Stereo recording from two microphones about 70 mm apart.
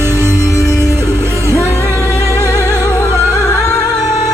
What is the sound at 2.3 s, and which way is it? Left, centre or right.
Music, left.